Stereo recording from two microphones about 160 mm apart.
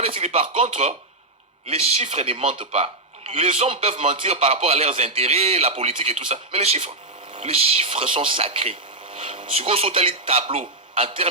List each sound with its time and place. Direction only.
0.0 s speech: 40° right (ahead or behind)